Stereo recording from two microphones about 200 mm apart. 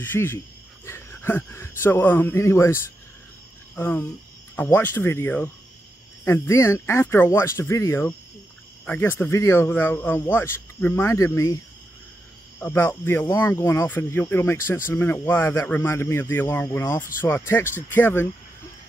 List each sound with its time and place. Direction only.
0.0 s speech: 10° left (ahead or behind)